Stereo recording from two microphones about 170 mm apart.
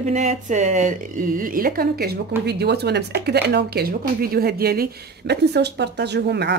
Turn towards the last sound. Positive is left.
turn(degrees=-80)